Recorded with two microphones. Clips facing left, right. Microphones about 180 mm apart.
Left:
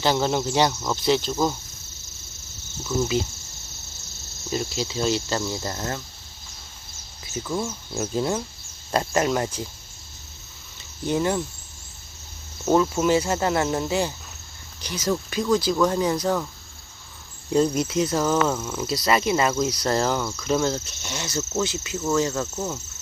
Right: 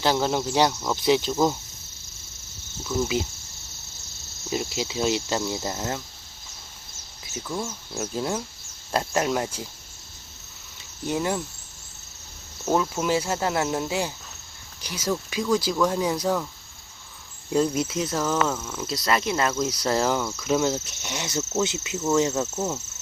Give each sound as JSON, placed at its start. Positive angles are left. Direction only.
{"t": 0.0, "sound": "speech", "side_deg": -5}
{"t": 1.0, "sound": "cricket", "side_deg": -10}
{"t": 4.4, "sound": "cricket", "side_deg": -10}
{"t": 7.3, "sound": "cricket", "side_deg": -5}
{"t": 8.0, "sound": "speech", "side_deg": 5}
{"t": 11.0, "sound": "speech", "side_deg": -5}
{"t": 12.7, "sound": "speech", "side_deg": -5}
{"t": 14.8, "sound": "cricket", "side_deg": -10}
{"t": 17.5, "sound": "speech", "side_deg": -5}
{"t": 20.3, "sound": "cricket", "side_deg": -5}
{"t": 22.5, "sound": "speech", "side_deg": -5}